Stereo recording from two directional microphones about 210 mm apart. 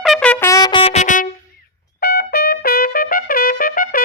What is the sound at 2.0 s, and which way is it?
Trumpet, 50° left (ahead or behind).